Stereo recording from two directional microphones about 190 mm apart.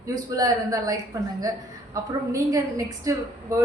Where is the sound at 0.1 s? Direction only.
20° right (ahead or behind).